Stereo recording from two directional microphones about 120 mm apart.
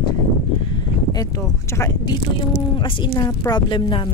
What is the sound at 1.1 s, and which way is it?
Speech, 30° left (ahead or behind).